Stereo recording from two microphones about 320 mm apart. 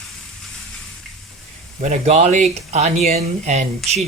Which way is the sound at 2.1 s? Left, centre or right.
Right.